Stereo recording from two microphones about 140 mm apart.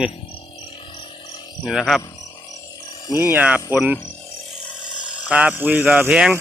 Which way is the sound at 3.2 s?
15° right (ahead or behind).